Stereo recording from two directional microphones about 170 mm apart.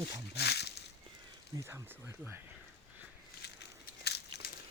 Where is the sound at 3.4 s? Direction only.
75° left (ahead or behind).